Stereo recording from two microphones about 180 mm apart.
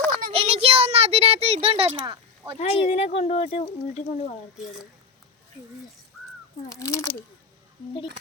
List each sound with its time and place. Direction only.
0.3 s a sound: 30° right (ahead or behind)
2.6 s speech: 35° left (ahead or behind)
6.7 s speech: 15° left (ahead or behind)